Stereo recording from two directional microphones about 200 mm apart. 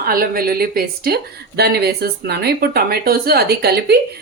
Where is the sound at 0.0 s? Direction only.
50° right (ahead or behind).